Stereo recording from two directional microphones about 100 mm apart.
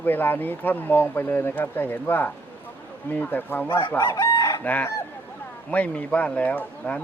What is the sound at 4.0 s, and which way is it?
Chicken, 40° left (ahead or behind).